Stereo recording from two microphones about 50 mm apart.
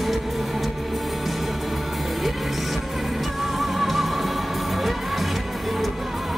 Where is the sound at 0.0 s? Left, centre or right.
Centre.